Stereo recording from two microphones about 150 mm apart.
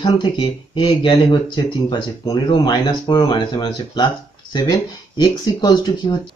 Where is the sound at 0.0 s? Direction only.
35° left (ahead or behind).